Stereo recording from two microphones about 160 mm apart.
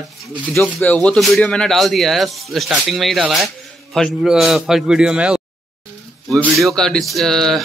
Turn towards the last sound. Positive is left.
turn(degrees=0)  # may be behind; listen again after turning